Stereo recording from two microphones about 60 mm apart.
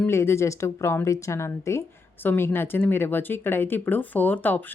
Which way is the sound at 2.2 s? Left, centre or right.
Left.